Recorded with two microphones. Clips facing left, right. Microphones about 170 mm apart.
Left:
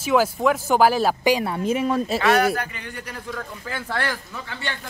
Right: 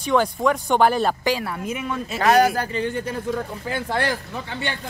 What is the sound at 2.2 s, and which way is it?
Speech, 35° right (ahead or behind).